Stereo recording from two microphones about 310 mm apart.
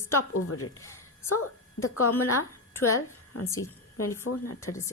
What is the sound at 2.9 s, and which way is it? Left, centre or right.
A woman's voice, left.